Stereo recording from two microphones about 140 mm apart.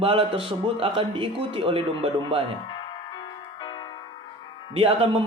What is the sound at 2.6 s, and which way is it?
Music, 35° left (ahead or behind).